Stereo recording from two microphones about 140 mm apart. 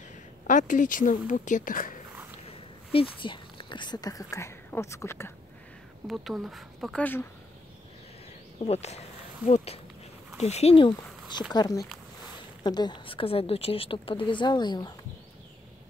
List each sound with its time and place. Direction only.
0.5 s a woman's voice: 65° left (ahead or behind)
2.5 s speech: 40° left (ahead or behind); by 5.3 s 20° left (ahead or behind)
6.0 s speech: centre (ahead or behind)
7.0 s speech: 15° left (ahead or behind)
8.6 s speech: 50° left (ahead or behind)
10.3 s speech: 50° left (ahead or behind)
10.9 s a woman's voice: 30° left (ahead or behind)